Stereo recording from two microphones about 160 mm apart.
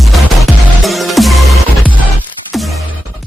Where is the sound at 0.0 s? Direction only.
Centre (ahead or behind).